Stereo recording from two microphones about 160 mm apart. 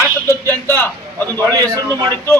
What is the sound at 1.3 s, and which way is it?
Speech, 20° right (ahead or behind).